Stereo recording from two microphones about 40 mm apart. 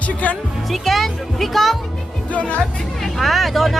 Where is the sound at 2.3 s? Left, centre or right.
Left.